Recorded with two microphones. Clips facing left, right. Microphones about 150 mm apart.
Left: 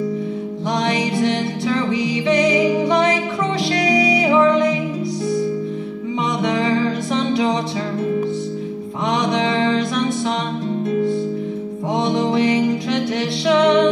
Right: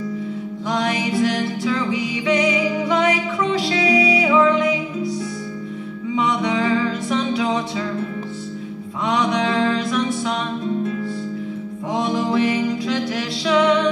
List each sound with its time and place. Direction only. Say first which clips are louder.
0.8 s music: left 1 dB; 30° left (ahead or behind)
6.1 s music: even; 25° left (ahead or behind)
12.1 s music: left 2 dB; 30° left (ahead or behind)